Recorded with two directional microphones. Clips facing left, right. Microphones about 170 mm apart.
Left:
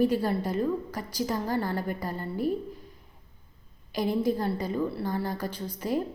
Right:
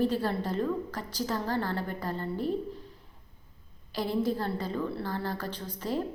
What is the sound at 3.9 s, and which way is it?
A woman's voice, 15° left (ahead or behind).